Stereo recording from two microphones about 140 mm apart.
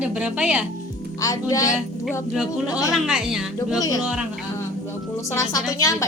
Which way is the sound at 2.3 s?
5° right (ahead or behind).